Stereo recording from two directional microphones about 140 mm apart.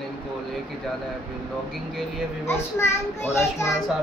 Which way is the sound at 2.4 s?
20° left (ahead or behind).